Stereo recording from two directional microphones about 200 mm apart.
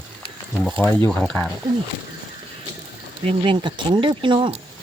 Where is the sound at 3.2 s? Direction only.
25° right (ahead or behind).